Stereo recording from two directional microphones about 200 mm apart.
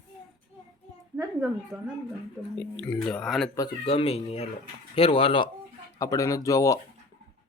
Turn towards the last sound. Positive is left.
turn(degrees=15)  # may be behind; listen again after turning